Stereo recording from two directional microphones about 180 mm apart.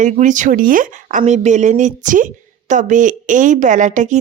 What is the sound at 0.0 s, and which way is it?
Speech, 45° right (ahead or behind).